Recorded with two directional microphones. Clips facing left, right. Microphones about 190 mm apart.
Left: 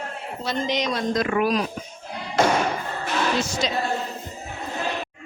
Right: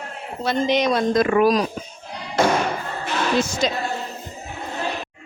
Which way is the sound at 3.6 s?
50° right (ahead or behind).